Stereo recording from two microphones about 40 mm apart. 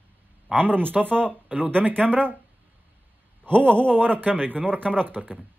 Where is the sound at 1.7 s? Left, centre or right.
Right.